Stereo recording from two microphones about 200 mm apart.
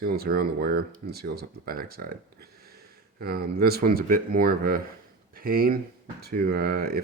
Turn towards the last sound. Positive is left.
turn(degrees=-50)  # may be behind; listen again after turning